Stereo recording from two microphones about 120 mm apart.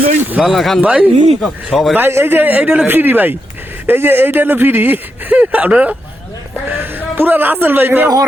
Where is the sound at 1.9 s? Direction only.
20° right (ahead or behind).